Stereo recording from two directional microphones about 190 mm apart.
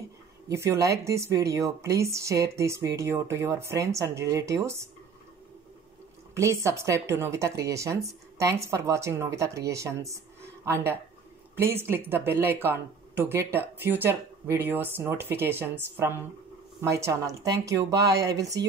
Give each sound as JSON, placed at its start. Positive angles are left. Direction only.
{"t": 0.5, "sound": "a woman's voice", "side_deg": -15}
{"t": 6.3, "sound": "a woman's voice", "side_deg": -15}
{"t": 16.9, "sound": "a woman's voice", "side_deg": -15}